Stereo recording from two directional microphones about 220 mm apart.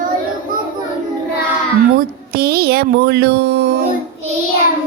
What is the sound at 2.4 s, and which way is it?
Speech, 45° right (ahead or behind).